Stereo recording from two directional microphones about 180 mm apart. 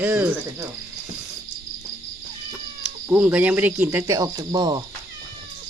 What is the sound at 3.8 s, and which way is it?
Speech, 5° right (ahead or behind).